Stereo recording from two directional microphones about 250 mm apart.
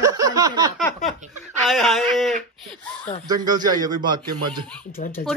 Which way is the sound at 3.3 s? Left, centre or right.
Centre.